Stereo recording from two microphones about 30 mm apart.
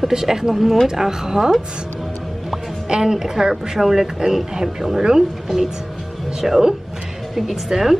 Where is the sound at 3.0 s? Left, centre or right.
Centre.